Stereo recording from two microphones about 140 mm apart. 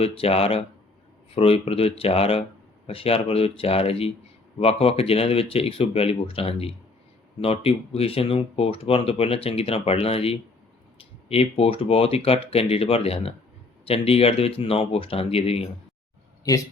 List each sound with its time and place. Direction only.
0.0 s speech: 45° left (ahead or behind)